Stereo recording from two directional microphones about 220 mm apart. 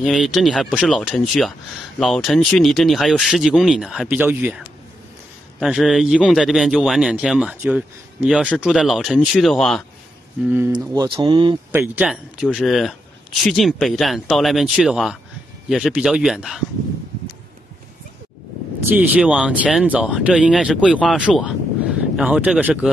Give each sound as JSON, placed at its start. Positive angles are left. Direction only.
{"t": 0.0, "sound": "a man's voice", "side_deg": 0}
{"t": 10.9, "sound": "speech", "side_deg": -15}
{"t": 11.7, "sound": "a man's voice", "side_deg": -5}
{"t": 18.9, "sound": "a man's voice", "side_deg": -5}